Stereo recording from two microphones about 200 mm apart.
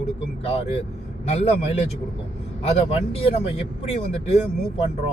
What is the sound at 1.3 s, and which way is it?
Speech, 30° left (ahead or behind).